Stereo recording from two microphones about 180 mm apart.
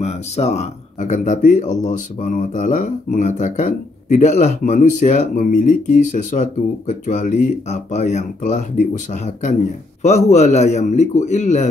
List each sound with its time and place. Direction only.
0.0 s a man's voice: 35° left (ahead or behind)